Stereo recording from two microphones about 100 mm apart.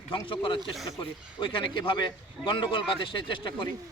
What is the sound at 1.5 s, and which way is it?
A man's voice, 55° left (ahead or behind).